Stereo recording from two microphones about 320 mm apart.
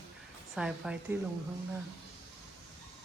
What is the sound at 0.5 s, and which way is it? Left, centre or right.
Speech, centre.